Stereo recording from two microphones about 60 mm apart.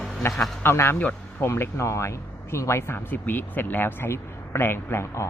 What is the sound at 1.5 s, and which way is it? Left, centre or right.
A man's voice, left.